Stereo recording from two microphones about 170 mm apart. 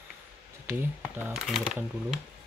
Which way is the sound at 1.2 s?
5° right (ahead or behind).